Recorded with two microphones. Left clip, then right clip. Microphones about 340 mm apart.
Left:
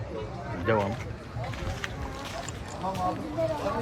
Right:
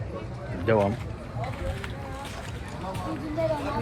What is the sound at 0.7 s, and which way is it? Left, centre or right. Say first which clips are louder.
Speech: right 3 dB; centre.